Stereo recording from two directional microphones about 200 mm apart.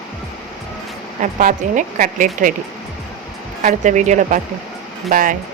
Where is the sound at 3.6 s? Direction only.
40° right (ahead or behind).